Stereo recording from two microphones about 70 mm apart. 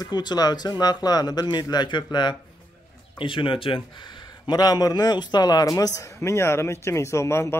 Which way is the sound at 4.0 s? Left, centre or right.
Left.